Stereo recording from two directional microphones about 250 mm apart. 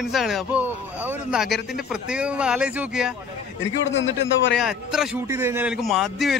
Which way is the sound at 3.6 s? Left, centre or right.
Left.